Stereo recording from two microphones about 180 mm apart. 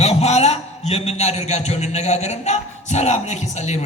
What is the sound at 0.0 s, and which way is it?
A man's voice, 35° left (ahead or behind).